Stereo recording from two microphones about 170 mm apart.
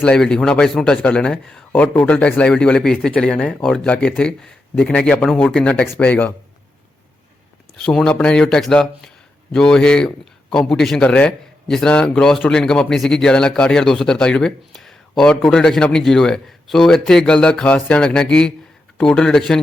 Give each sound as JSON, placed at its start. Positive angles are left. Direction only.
{"t": 0.0, "sound": "a man's voice", "side_deg": 5}
{"t": 7.8, "sound": "a man's voice", "side_deg": 5}